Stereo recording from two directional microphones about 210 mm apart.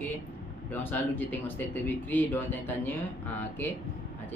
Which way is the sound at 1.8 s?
10° left (ahead or behind).